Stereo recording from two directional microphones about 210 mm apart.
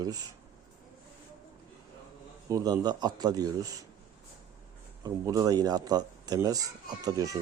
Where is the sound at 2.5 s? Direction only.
20° right (ahead or behind).